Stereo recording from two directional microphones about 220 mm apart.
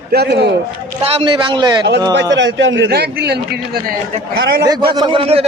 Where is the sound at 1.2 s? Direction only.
20° right (ahead or behind).